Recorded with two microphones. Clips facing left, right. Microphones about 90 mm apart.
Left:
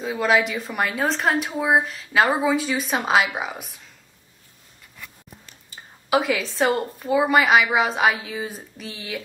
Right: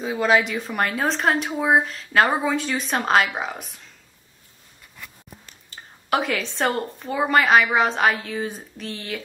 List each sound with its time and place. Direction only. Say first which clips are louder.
0.0 s a woman's voice: right 1 dB; centre (ahead or behind)
5.7 s a woman's voice: left 2 dB; 5° left (ahead or behind)